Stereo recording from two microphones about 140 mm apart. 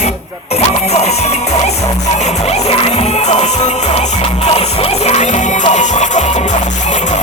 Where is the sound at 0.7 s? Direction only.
50° left (ahead or behind).